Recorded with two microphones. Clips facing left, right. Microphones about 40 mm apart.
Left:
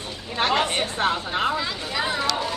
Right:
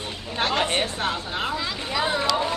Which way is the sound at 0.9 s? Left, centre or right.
Left.